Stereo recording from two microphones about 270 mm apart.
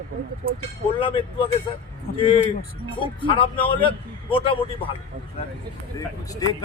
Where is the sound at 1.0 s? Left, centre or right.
Centre.